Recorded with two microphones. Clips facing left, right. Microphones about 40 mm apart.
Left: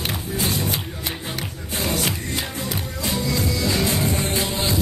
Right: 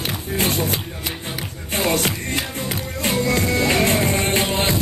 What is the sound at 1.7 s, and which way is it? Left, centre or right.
Music, right.